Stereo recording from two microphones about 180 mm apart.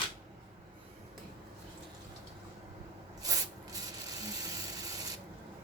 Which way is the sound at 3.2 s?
20° right (ahead or behind).